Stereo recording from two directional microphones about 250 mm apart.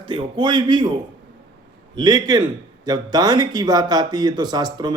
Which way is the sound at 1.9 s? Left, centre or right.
Centre.